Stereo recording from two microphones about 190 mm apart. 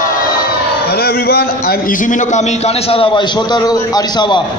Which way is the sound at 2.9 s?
25° left (ahead or behind).